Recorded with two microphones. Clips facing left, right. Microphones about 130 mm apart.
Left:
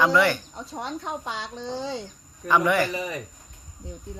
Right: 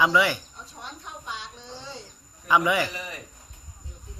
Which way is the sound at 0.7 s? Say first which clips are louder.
Left 10 dB; 90° left.